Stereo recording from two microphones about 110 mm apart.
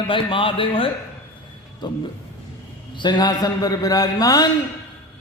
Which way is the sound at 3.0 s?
40° left (ahead or behind).